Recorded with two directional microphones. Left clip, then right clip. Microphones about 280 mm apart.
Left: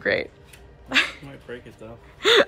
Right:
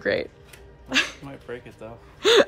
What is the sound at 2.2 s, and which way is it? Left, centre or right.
Gasp, centre.